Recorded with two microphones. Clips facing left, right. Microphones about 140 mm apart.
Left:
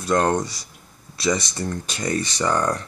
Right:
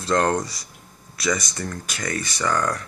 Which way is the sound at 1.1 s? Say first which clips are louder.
Left 2 dB; 30° left (ahead or behind).